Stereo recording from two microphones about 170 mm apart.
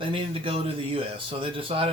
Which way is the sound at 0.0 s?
30° right (ahead or behind).